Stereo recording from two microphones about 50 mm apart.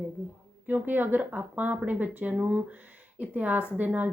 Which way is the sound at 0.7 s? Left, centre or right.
Right.